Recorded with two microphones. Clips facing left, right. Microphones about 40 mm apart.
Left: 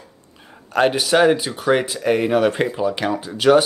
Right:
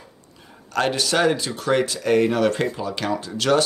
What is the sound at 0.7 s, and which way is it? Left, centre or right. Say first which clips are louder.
Speech: left 5 dB; centre.